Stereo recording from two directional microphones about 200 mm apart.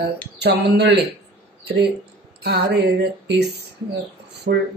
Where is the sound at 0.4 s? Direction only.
55° right (ahead or behind).